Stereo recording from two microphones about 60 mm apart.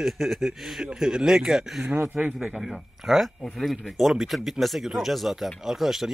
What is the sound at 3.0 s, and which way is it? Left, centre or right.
Speech, centre.